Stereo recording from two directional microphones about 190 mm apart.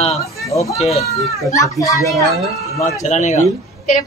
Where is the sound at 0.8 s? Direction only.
35° left (ahead or behind).